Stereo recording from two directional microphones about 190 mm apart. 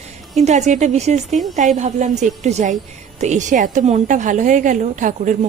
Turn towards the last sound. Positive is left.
turn(degrees=-40)  # may be behind; listen again after turning